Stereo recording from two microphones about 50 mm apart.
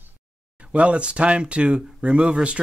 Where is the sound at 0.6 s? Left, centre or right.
Right.